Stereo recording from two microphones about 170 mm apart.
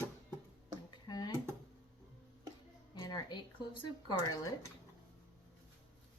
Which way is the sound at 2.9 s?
25° left (ahead or behind).